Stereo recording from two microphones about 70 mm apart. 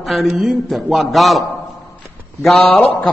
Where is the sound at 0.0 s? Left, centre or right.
Centre.